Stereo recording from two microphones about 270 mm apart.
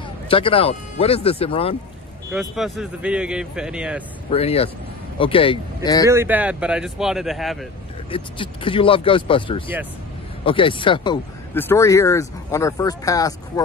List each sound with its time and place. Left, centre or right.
0.3 s speech: centre
2.3 s speech: centre
4.3 s speech: left
6.0 s speech: centre
8.1 s speech: centre